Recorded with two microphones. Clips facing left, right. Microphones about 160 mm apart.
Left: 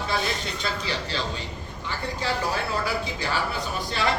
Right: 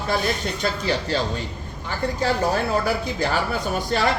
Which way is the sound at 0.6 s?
45° right (ahead or behind).